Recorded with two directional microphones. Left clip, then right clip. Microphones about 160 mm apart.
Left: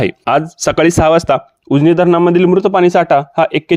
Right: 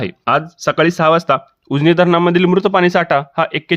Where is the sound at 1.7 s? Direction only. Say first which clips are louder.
Left 2 dB; 10° left (ahead or behind).